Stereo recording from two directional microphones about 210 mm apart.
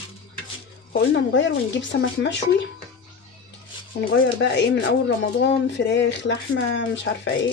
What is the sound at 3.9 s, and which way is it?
Speech, 50° left (ahead or behind).